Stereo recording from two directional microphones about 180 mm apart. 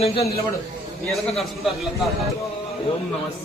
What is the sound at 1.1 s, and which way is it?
Speech, centre (ahead or behind).